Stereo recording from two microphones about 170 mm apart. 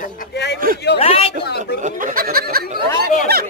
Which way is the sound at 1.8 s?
50° right (ahead or behind).